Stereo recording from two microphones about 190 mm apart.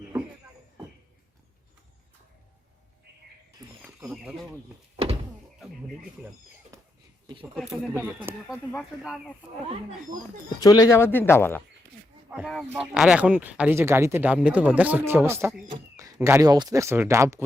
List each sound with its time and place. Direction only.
4.0 s speech: 5° right (ahead or behind)
5.0 s door: 30° right (ahead or behind)
6.7 s a sound: 15° right (ahead or behind)
7.5 s speech: centre (ahead or behind)
10.6 s speech: 20° left (ahead or behind)
12.3 s speech: centre (ahead or behind)